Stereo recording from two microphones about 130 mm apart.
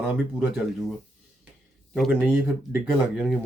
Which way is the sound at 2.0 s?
Centre (ahead or behind).